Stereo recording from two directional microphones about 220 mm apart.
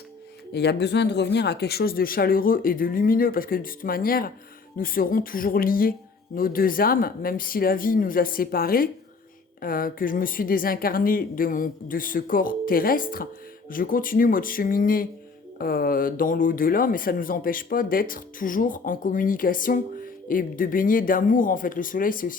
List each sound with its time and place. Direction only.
0.5 s speech: 50° left (ahead or behind)